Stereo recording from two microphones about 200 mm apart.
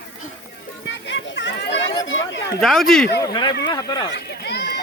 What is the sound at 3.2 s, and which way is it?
Speech, 20° left (ahead or behind).